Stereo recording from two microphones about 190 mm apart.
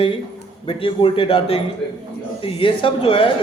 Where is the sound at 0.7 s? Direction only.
30° left (ahead or behind).